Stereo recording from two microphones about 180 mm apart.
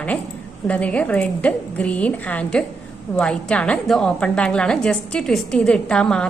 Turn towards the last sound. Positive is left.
turn(degrees=5)  # may be behind; listen again after turning